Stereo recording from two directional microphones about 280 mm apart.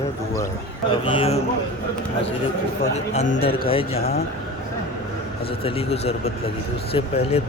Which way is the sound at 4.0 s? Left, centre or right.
Left.